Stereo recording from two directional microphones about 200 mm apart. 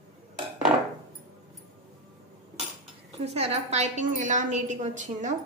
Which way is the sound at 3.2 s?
30° right (ahead or behind).